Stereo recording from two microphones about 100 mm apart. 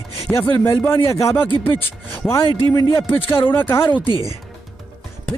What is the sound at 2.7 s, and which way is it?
Speech, 40° left (ahead or behind).